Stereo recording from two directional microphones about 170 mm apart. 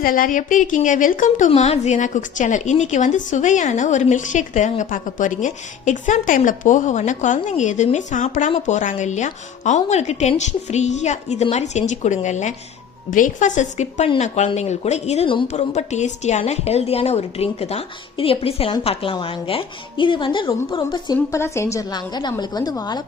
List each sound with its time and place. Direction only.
0.0 s a woman's voice: 55° left (ahead or behind); by 23.0 s 25° left (ahead or behind)